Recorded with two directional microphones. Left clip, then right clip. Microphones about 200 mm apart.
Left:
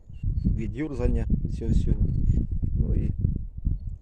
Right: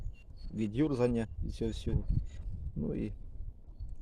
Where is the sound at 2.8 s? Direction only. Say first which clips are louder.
Even; 5° right (ahead or behind).